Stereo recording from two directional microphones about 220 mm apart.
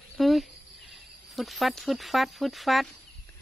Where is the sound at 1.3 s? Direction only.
Centre (ahead or behind).